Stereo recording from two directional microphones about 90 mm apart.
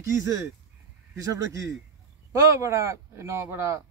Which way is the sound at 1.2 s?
40° right (ahead or behind).